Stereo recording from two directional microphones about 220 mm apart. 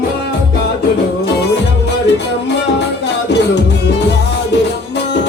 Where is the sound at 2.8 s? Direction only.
50° left (ahead or behind).